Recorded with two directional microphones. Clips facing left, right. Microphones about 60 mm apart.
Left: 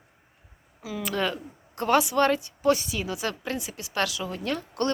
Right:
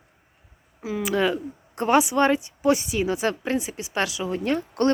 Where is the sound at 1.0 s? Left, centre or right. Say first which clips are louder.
Right 5 dB; centre.